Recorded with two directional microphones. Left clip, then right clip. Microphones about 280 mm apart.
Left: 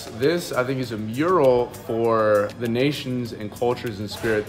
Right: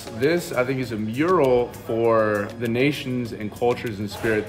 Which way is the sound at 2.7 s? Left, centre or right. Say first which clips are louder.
Right 2 dB; left.